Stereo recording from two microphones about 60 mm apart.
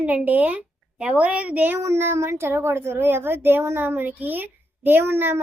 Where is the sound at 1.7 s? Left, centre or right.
Right.